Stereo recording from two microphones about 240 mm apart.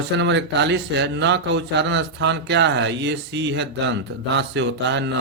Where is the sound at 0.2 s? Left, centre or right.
Right.